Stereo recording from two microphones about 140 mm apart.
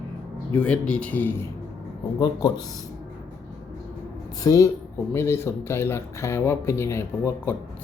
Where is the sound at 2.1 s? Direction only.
30° left (ahead or behind).